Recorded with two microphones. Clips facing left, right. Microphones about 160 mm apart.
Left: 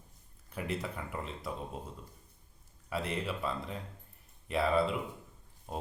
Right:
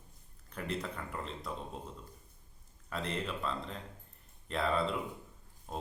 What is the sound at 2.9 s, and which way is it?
Speech, 5° left (ahead or behind).